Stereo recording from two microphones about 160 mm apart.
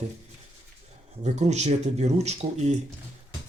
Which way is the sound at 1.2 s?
45° right (ahead or behind).